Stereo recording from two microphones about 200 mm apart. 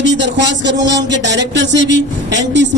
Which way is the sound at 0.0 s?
60° right (ahead or behind).